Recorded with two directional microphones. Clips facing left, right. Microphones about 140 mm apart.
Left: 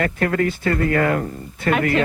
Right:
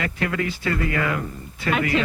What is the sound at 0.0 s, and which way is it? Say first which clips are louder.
Speech: left 6 dB; 45° left (ahead or behind).